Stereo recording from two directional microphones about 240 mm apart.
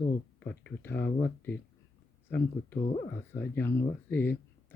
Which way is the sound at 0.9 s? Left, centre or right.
Left.